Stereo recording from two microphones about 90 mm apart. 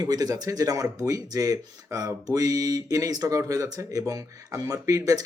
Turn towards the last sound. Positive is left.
turn(degrees=-40)  # may be behind; listen again after turning